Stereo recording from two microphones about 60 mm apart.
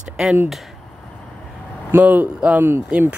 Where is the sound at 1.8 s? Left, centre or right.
Right.